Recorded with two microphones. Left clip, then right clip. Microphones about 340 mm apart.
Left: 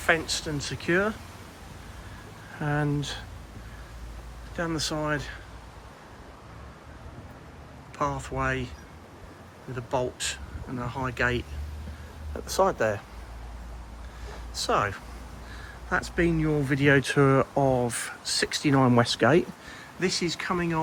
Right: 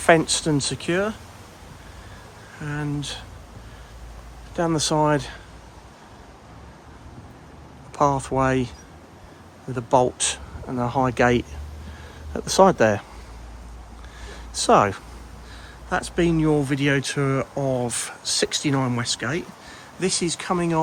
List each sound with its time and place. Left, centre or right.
0.0 s speech: centre
2.6 s speech: centre
4.5 s speech: centre
7.9 s speech: centre
9.7 s speech: centre
12.5 s speech: right
14.5 s speech: centre